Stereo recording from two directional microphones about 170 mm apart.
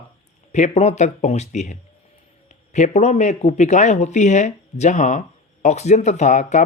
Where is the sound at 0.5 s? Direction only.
45° left (ahead or behind).